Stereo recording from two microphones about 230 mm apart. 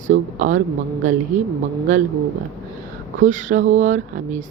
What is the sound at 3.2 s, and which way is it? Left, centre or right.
Speech, right.